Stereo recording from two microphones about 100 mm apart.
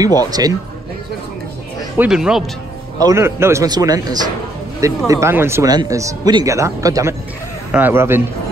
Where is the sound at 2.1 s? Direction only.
5° right (ahead or behind).